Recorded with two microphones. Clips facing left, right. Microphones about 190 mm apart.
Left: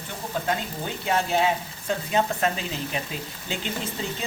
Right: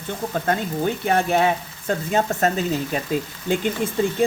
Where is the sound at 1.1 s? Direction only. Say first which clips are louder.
Right 2 dB; 55° right (ahead or behind).